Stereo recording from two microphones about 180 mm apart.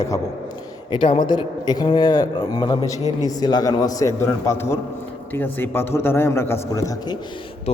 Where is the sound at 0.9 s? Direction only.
30° left (ahead or behind).